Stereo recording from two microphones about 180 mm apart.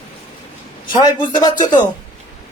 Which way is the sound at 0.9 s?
25° left (ahead or behind).